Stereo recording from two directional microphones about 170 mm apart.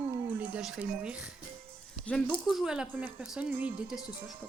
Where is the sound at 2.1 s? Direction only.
5° left (ahead or behind).